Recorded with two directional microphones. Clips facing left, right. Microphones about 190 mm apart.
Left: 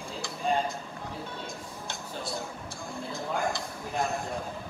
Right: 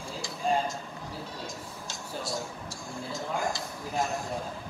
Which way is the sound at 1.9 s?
60° left (ahead or behind).